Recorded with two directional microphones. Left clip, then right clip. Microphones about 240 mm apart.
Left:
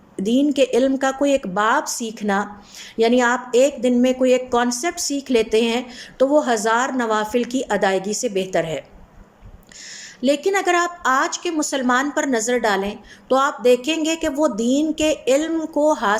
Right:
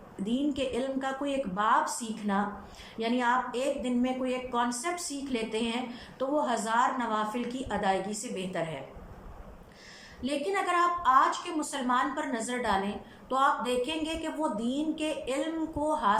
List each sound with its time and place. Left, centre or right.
0.3 s a woman's voice: left
10.2 s a woman's voice: left